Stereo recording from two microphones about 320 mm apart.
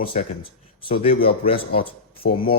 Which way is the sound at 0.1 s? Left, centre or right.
Left.